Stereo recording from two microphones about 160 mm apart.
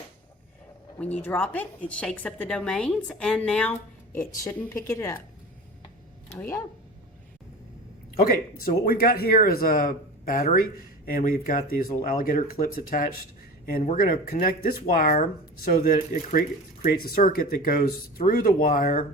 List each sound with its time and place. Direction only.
0.9 s a woman's voice: 10° left (ahead or behind)
6.4 s speech: 20° left (ahead or behind)
8.8 s speech: 65° left (ahead or behind)